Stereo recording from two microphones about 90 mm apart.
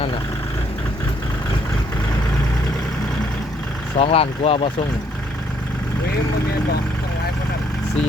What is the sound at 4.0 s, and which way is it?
Speech, 90° left.